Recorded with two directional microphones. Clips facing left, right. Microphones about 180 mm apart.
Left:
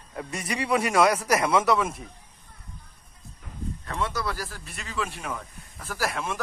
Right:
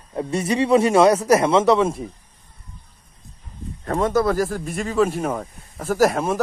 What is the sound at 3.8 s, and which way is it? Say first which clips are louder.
Speech: right 12 dB; 45° right (ahead or behind).